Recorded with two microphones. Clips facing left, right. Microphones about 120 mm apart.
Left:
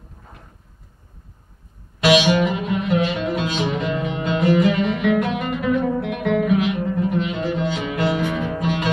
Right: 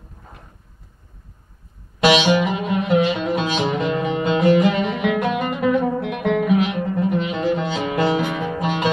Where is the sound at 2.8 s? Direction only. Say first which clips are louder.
Right 4 dB; 20° right (ahead or behind).